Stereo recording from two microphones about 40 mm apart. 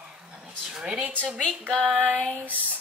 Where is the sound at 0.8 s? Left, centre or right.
Right.